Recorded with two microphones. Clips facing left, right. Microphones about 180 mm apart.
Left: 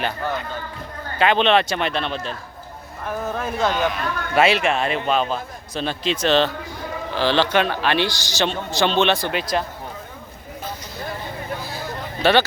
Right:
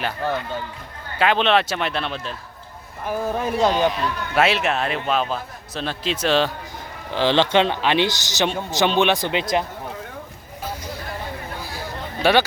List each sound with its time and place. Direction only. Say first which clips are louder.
1.2 s a man's voice: left 1 dB; centre (ahead or behind)
3.6 s speech: right 2 dB; 30° right (ahead or behind)
4.4 s a man's voice: left 2 dB; centre (ahead or behind)
7.2 s a man's voice: right 1 dB; 20° right (ahead or behind)
12.2 s speech: even; 10° right (ahead or behind)